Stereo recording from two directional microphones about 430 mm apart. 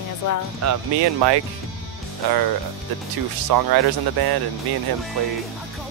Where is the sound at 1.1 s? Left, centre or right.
Right.